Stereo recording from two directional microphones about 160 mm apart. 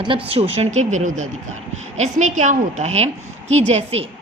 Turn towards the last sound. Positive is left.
turn(degrees=-40)  # may be behind; listen again after turning